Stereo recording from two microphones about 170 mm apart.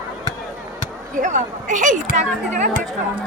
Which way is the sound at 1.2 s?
50° right (ahead or behind).